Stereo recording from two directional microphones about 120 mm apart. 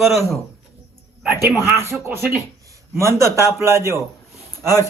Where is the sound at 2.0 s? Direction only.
20° right (ahead or behind).